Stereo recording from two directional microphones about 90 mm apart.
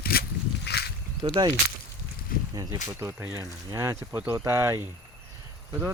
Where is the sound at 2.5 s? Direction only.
45° right (ahead or behind).